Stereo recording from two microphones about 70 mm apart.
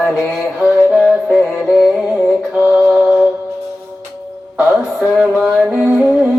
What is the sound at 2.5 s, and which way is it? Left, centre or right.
Mantra, centre.